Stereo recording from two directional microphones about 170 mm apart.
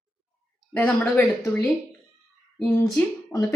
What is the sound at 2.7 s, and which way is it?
Speech, 15° left (ahead or behind).